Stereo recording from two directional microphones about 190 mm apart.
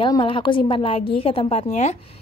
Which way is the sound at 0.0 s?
25° left (ahead or behind).